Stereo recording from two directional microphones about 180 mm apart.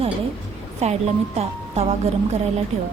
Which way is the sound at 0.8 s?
35° right (ahead or behind).